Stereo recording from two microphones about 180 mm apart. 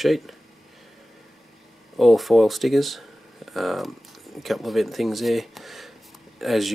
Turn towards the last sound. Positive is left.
turn(degrees=0)  # may be behind; listen again after turning